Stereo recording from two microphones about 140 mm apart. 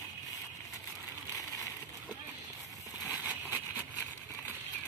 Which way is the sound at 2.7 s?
25° left (ahead or behind).